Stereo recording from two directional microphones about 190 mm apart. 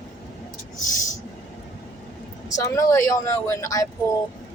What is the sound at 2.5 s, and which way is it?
Speech, 20° left (ahead or behind).